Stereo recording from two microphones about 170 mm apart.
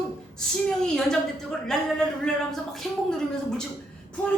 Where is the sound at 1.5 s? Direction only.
5° left (ahead or behind).